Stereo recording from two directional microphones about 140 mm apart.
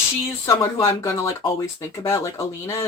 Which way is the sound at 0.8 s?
20° left (ahead or behind).